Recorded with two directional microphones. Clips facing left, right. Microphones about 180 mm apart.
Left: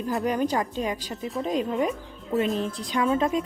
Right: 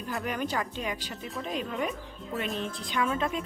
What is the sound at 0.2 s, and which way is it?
Speech, 25° left (ahead or behind).